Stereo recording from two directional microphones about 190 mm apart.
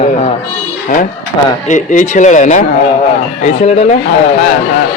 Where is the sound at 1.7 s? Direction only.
40° left (ahead or behind).